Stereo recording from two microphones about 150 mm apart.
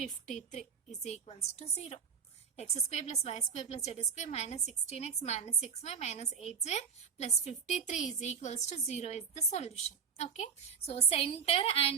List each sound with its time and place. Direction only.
0.3 s a woman's voice: 55° left (ahead or behind)
2.6 s a woman's voice: 45° left (ahead or behind)